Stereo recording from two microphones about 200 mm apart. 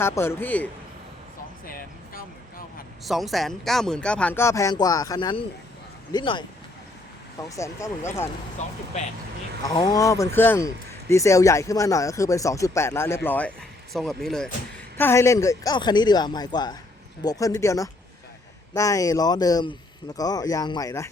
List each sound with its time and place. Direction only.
0.0 s speech: 10° left (ahead or behind)
1.6 s vehicle: 45° left (ahead or behind)
3.0 s speech: centre (ahead or behind); by 6.4 s 20° left (ahead or behind)
7.5 s speech: 15° left (ahead or behind)
8.6 s speech: 35° left (ahead or behind)
9.6 s speech: 20° left (ahead or behind)